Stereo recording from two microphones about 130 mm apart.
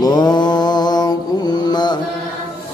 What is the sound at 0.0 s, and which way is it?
Mantra, 30° left (ahead or behind).